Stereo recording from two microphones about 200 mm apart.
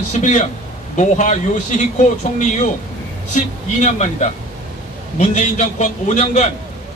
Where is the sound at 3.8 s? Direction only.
35° left (ahead or behind).